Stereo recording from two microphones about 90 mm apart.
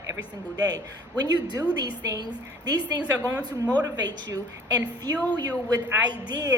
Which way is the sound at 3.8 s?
45° right (ahead or behind).